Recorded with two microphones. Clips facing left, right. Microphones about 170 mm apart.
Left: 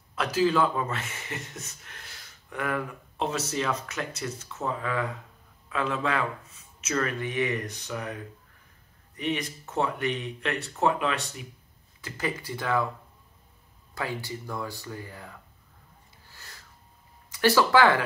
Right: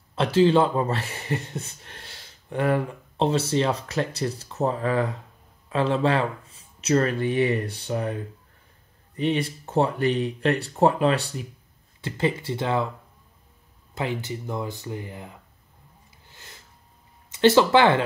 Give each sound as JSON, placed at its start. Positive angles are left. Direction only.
{"t": 0.1, "sound": "speech", "side_deg": -30}
{"t": 13.9, "sound": "speech", "side_deg": -20}
{"t": 16.3, "sound": "a sound", "side_deg": -20}
{"t": 17.3, "sound": "speech", "side_deg": -25}